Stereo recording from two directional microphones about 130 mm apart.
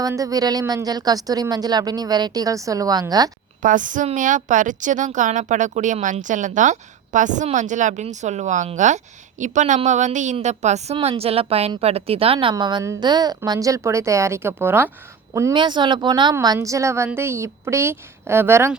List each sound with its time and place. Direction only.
0.0 s a woman's voice: 25° right (ahead or behind)
3.6 s a woman's voice: 90° right; by 8.0 s 75° right (ahead or behind)
8.0 s a woman's voice: 65° right (ahead or behind)
10.9 s a woman's voice: 45° right (ahead or behind); by 15.5 s 25° right (ahead or behind)
15.5 s speech: 35° right (ahead or behind)
16.3 s a woman's voice: 25° right (ahead or behind)